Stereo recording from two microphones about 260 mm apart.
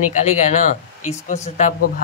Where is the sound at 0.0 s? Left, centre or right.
Left.